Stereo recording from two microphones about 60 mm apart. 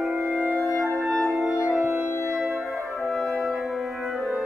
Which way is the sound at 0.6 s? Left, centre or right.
Centre.